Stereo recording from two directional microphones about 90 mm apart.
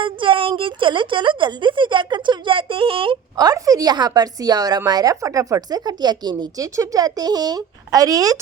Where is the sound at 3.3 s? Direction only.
45° right (ahead or behind).